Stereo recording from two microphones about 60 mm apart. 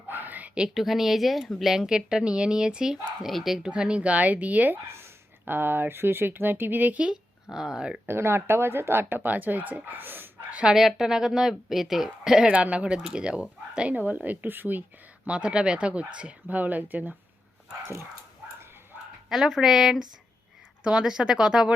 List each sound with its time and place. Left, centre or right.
0.1 s a sound: right
0.5 s a woman's voice: centre
0.8 s speech: centre
3.6 s speech: centre
7.5 s speech: centre
8.0 s speech: right
10.5 s speech: centre
10.8 s speech: centre
12.5 s speech: right
15.3 s speech: centre
19.3 s speech: centre